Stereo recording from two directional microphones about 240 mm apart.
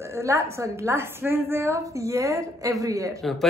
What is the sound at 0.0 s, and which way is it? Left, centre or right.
A woman's voice, centre.